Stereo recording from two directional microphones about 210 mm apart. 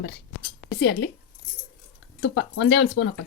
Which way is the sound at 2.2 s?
55° left (ahead or behind).